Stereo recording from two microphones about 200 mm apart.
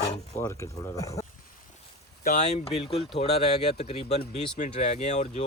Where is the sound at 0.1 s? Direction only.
15° left (ahead or behind).